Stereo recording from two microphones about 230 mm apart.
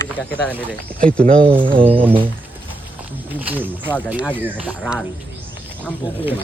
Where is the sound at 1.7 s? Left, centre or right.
Right.